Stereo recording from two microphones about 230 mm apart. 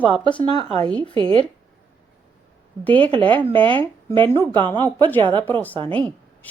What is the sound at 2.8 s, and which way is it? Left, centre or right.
Speech, centre.